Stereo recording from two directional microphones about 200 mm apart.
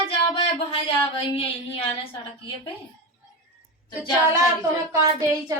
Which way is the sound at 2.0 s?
25° left (ahead or behind).